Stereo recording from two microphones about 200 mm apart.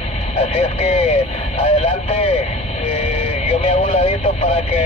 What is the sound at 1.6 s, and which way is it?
Speech, 40° left (ahead or behind).